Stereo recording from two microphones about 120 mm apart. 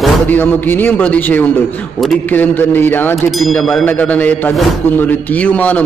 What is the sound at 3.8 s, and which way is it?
A man's voice, 15° left (ahead or behind).